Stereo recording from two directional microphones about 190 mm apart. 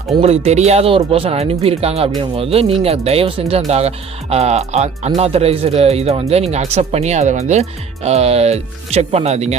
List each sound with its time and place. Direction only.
0.2 s speech: 35° right (ahead or behind)